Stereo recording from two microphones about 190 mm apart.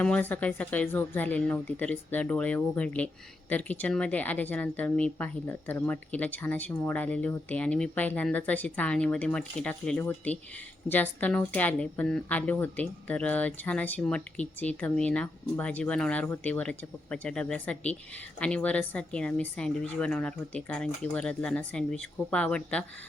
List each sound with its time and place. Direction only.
0.0 s a woman's voice: 10° left (ahead or behind)